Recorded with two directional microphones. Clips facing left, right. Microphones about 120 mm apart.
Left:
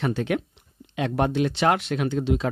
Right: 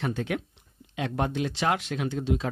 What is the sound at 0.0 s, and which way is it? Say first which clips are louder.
Speech: left 5 dB; 75° left (ahead or behind).